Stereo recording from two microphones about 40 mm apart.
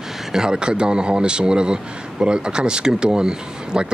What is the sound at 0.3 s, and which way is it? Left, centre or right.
Speech, centre.